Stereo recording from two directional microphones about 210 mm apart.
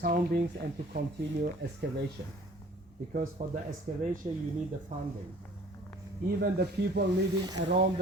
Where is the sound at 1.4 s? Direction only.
50° right (ahead or behind).